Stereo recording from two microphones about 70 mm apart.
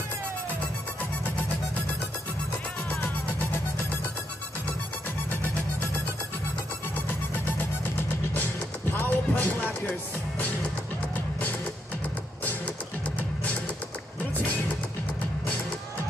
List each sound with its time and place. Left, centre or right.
2.9 s music: left
7.1 s music: left
8.9 s music: left
12.4 s music: left